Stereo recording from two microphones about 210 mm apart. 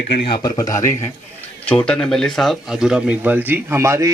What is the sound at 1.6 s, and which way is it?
Speech, 5° left (ahead or behind).